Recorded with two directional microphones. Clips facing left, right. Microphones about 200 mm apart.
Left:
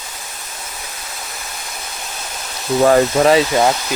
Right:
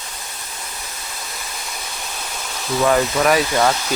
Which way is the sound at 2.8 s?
35° left (ahead or behind).